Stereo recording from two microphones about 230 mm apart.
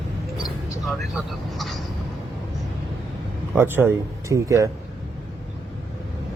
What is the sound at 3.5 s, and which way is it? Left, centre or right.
Speech, centre.